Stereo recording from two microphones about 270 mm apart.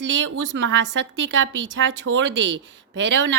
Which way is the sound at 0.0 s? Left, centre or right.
Right.